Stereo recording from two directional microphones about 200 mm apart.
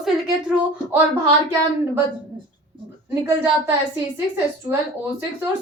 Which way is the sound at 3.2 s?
10° right (ahead or behind).